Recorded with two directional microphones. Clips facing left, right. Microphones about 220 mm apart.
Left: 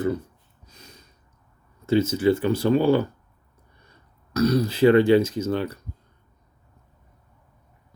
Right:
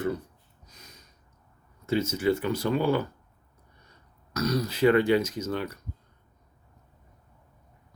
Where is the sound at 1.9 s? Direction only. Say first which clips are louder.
Left 5 dB; 30° left (ahead or behind).